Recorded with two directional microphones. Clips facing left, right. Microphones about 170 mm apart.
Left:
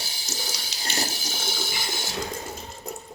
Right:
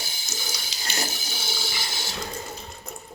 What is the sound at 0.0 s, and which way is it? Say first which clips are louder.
Water tap: left 1 dB; 35° left (ahead or behind).